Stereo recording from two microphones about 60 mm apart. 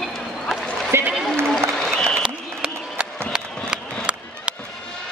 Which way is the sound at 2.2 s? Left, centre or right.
Centre.